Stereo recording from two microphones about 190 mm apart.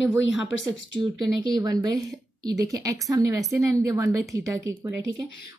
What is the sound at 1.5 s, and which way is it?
A woman's voice, 20° right (ahead or behind).